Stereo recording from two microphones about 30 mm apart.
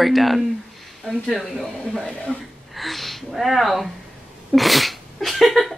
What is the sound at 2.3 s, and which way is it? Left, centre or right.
Speech, left.